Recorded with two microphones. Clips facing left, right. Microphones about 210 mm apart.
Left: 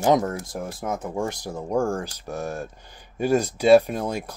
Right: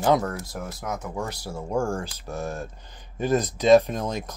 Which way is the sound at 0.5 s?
30° left (ahead or behind).